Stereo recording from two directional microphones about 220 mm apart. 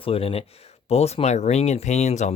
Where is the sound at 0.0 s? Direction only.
25° left (ahead or behind).